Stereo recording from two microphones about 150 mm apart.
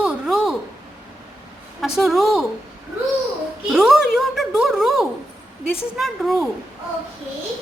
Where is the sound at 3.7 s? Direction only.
5° right (ahead or behind).